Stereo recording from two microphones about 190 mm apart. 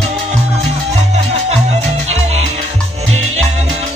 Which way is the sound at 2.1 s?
35° right (ahead or behind).